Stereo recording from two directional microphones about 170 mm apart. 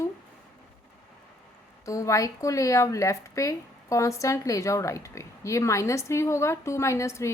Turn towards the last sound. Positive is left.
turn(degrees=15)  # may be behind; listen again after turning